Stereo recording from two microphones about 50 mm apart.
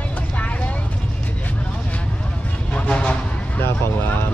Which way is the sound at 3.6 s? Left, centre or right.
Left.